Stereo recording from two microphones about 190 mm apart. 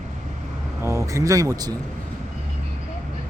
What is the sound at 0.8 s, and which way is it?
Speech, 15° right (ahead or behind).